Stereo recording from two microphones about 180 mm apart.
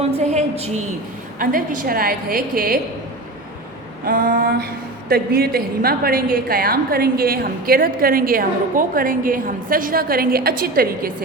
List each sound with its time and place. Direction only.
0.0 s a woman's voice: 35° right (ahead or behind)
1.4 s a woman's voice: 50° right (ahead or behind)
4.0 s a woman's voice: 50° right (ahead or behind)